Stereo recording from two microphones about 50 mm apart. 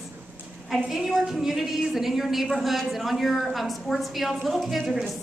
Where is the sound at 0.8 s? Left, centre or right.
Centre.